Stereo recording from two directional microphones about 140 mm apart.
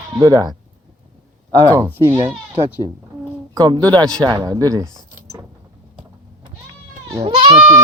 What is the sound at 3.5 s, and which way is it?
Speech, 30° right (ahead or behind).